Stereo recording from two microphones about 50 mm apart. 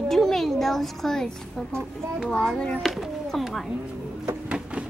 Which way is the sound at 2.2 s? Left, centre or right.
Centre.